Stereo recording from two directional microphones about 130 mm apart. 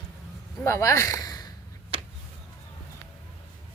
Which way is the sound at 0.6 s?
20° left (ahead or behind).